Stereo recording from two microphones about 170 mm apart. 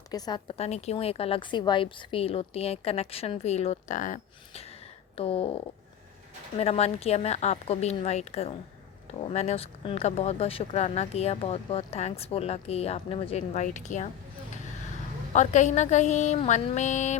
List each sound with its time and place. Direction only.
0.1 s speech: 25° left (ahead or behind); by 4.6 s 50° left (ahead or behind)
5.1 s speech: 35° left (ahead or behind)
15.3 s a sound: 45° left (ahead or behind)